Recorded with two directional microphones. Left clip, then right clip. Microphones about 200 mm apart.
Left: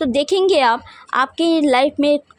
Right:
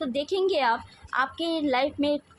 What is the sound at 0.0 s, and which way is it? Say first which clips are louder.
A woman's voice: left 10 dB; 45° left (ahead or behind).